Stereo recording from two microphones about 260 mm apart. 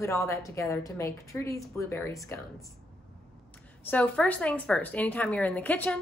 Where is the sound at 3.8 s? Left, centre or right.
Centre.